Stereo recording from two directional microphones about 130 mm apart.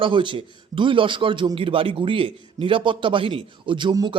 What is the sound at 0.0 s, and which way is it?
A man's voice, 40° right (ahead or behind).